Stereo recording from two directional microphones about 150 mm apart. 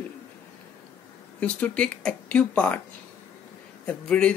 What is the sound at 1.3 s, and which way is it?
Speech, 10° left (ahead or behind).